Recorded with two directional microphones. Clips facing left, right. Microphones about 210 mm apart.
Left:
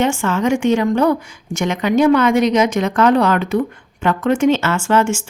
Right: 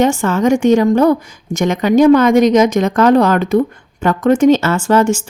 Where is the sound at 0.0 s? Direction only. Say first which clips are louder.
Right 4 dB; 40° right (ahead or behind).